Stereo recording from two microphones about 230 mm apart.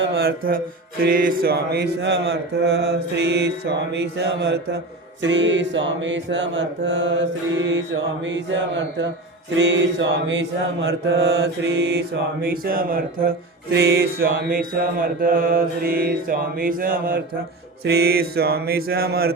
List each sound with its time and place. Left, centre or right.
0.0 s mantra: right